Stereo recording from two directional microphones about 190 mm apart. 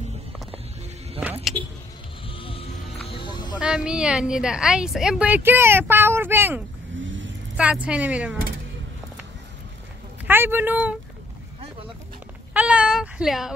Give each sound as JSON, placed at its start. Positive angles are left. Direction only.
{"t": 2.2, "sound": "music", "side_deg": 30}
{"t": 3.5, "sound": "a woman's voice", "side_deg": -5}
{"t": 7.0, "sound": "vehicle", "side_deg": -80}
{"t": 7.5, "sound": "a woman's voice", "side_deg": -5}
{"t": 10.2, "sound": "speech", "side_deg": -10}
{"t": 12.5, "sound": "a sound", "side_deg": -5}